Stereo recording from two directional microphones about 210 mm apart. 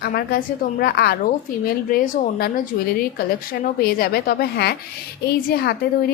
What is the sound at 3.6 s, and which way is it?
A woman's voice, 45° left (ahead or behind).